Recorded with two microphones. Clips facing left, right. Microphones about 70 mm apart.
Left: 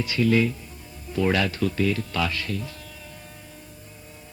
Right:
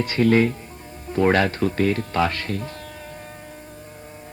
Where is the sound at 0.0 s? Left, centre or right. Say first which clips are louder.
Right 4 dB; right.